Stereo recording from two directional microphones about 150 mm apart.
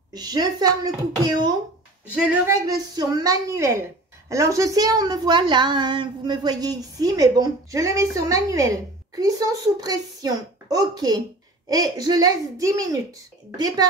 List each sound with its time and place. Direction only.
0.1 s a woman's voice: 25° right (ahead or behind)